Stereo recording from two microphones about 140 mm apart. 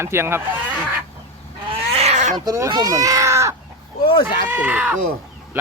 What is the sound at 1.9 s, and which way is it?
Goat, 55° right (ahead or behind).